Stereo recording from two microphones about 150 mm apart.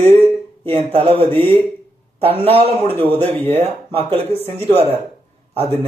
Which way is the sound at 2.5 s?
40° right (ahead or behind).